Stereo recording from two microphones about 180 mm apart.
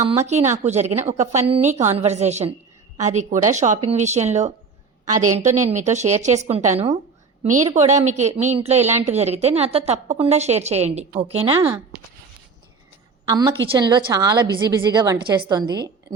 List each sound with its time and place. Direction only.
0.3 s speech: 40° right (ahead or behind)
13.2 s a woman's voice: 20° right (ahead or behind)